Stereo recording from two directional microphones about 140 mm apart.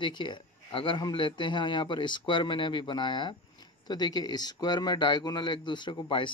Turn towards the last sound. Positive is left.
turn(degrees=35)  # may be behind; listen again after turning